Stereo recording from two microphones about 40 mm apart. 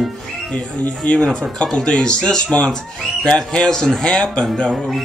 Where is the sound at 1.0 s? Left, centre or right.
Left.